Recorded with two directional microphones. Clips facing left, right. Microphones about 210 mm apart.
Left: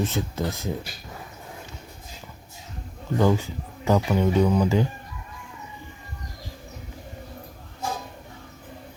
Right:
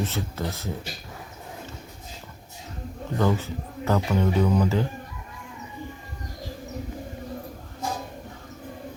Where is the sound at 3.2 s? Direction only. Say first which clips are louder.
Left 2 dB; 15° left (ahead or behind).